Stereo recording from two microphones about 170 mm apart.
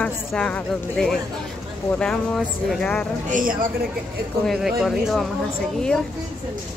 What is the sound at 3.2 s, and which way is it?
Speech, 50° right (ahead or behind).